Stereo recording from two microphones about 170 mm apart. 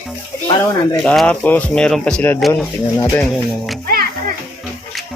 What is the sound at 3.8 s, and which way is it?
Music, 60° right (ahead or behind).